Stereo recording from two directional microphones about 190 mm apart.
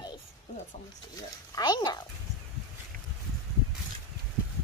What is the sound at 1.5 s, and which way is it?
Speech, 20° left (ahead or behind).